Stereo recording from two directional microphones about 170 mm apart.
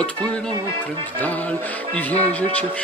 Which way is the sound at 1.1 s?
10° left (ahead or behind).